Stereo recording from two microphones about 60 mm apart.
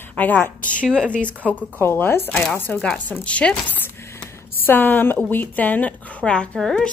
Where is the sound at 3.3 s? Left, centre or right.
Left.